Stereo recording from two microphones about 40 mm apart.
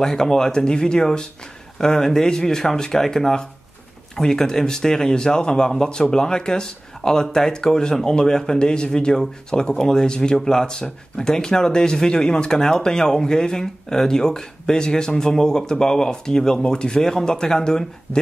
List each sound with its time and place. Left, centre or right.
0.0 s speech: centre